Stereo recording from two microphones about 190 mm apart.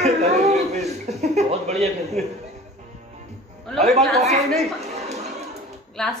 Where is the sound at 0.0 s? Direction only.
35° right (ahead or behind).